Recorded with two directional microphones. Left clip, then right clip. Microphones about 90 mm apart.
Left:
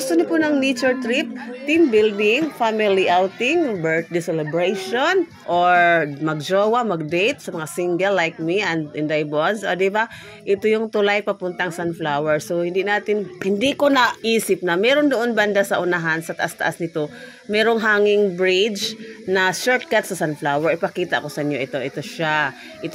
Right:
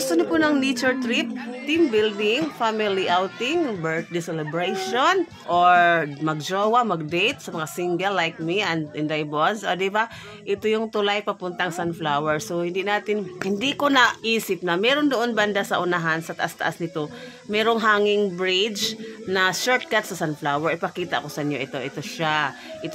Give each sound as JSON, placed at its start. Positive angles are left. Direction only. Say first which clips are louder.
{"t": 0.0, "sound": "a woman's voice", "louder": "left 2 dB", "side_deg": 5}
{"t": 1.7, "sound": "a woman's voice", "louder": "left 5 dB", "side_deg": 30}
{"t": 14.2, "sound": "speech", "louder": "left 4 dB", "side_deg": 35}